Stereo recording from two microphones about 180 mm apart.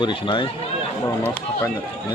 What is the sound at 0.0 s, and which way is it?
Speech, 25° left (ahead or behind).